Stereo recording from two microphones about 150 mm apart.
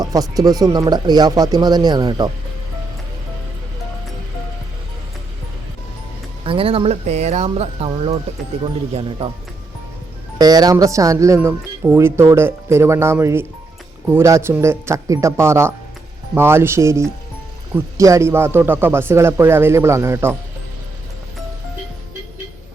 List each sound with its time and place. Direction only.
0.0 s speech: 25° right (ahead or behind)
6.4 s speech: 35° right (ahead or behind)
10.3 s speech: 25° right (ahead or behind)